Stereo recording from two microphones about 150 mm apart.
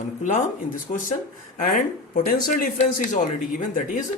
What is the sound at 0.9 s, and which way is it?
Speech, 55° left (ahead or behind).